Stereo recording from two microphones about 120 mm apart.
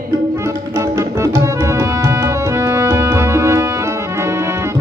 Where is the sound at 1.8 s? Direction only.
25° right (ahead or behind).